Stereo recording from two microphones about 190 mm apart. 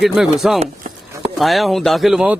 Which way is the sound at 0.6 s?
35° right (ahead or behind).